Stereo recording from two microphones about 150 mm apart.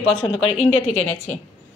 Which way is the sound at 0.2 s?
40° left (ahead or behind).